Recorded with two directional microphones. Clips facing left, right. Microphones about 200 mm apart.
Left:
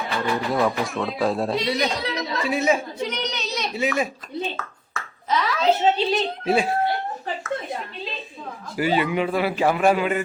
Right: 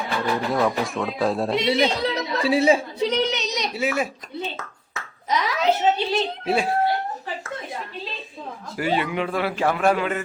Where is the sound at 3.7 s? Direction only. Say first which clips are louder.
Left 1 dB; 5° right (ahead or behind).